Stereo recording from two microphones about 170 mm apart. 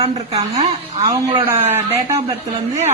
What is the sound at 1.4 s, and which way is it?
Speech, 15° right (ahead or behind).